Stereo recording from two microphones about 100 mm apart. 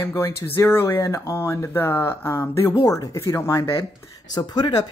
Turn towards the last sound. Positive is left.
turn(degrees=45)  # may be behind; listen again after turning